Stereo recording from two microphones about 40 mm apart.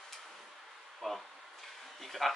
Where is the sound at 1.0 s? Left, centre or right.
Centre.